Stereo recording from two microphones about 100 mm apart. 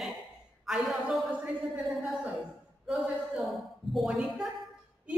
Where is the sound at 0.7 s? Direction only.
5° right (ahead or behind).